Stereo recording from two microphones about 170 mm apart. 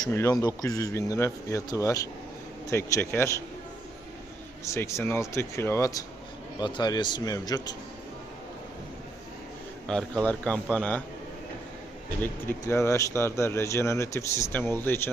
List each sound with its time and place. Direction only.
0.0 s speech: 20° left (ahead or behind)
4.6 s speech: 15° left (ahead or behind)
10.2 s speech: 5° left (ahead or behind)
12.2 s speech: 15° left (ahead or behind)